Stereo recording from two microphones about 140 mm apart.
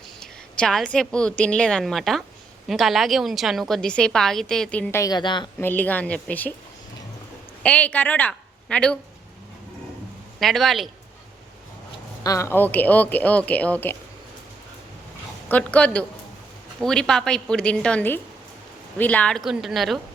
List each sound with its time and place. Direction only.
0.2 s a woman's voice: 5° left (ahead or behind)
5.1 s a woman's voice: 35° left (ahead or behind)
5.5 s a woman's voice: 15° left (ahead or behind)
7.6 s a woman's voice: 10° left (ahead or behind)
10.4 s a woman's voice: centre (ahead or behind)
12.2 s a woman's voice: 25° left (ahead or behind)
15.4 s a woman's voice: 10° left (ahead or behind)